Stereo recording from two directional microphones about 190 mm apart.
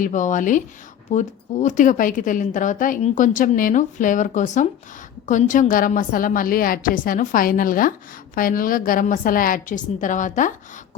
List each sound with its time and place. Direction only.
0.0 s a woman's voice: 40° left (ahead or behind)